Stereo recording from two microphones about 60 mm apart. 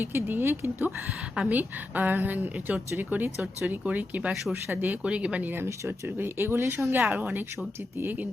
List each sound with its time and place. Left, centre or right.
0.0 s speech: right
1.5 s a woman's voice: right
5.0 s a woman's voice: centre
6.1 s speech: right
7.1 s a woman's voice: right